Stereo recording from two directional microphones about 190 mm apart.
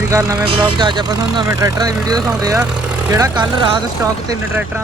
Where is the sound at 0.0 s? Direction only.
15° right (ahead or behind).